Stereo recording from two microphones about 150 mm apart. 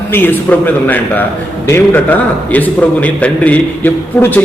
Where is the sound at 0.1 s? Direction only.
15° left (ahead or behind).